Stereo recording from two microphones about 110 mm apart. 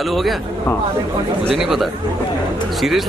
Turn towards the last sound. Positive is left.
turn(degrees=0)  # may be behind; listen again after turning